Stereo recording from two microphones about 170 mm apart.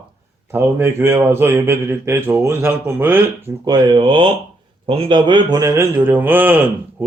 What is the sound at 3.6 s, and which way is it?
Speech, 25° right (ahead or behind).